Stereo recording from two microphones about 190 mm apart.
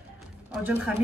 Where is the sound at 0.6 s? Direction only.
10° right (ahead or behind).